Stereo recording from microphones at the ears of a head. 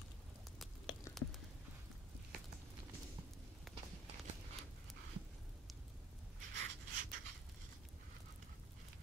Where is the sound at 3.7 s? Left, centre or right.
Right.